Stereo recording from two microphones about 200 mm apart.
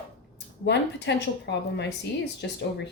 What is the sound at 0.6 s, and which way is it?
A woman's voice, 60° left (ahead or behind).